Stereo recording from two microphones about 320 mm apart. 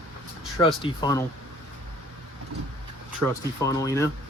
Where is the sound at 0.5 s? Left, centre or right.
Centre.